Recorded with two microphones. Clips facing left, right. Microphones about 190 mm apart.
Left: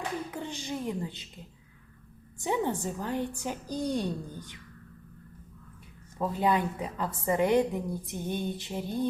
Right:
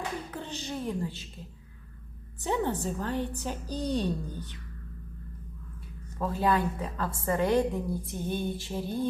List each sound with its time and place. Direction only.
0.3 s a woman's voice: 15° left (ahead or behind)
2.4 s a woman's voice: 15° left (ahead or behind)
6.1 s a woman's voice: 15° left (ahead or behind)
8.5 s music: 20° left (ahead or behind)